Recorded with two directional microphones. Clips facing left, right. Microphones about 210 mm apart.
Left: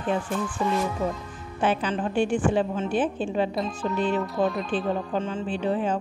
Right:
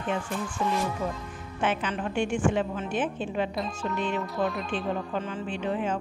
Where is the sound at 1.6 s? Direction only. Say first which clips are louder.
Left 4 dB; 35° left (ahead or behind).